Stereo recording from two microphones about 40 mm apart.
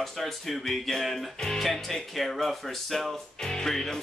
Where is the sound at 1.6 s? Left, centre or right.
Centre.